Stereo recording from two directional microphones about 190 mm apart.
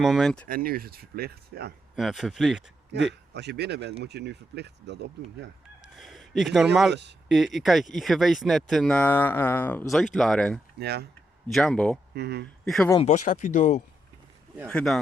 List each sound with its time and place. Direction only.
0.0 s speech: centre (ahead or behind)
0.4 s speech: 50° right (ahead or behind)
2.0 s speech: centre (ahead or behind)
2.9 s speech: 65° right (ahead or behind)
6.0 s speech: centre (ahead or behind)
6.9 s speech: 65° right (ahead or behind)
7.3 s speech: centre (ahead or behind)
10.8 s speech: 60° right (ahead or behind)
11.4 s speech: centre (ahead or behind)
12.1 s speech: 60° right (ahead or behind)
12.6 s speech: centre (ahead or behind)
13.0 s speech: 35° left (ahead or behind)
14.7 s speech: 5° left (ahead or behind)